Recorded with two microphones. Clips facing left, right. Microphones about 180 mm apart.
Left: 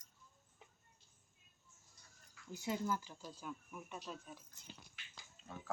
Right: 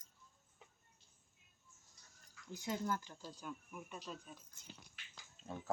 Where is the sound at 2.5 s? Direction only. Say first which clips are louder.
Left 1 dB; 5° left (ahead or behind).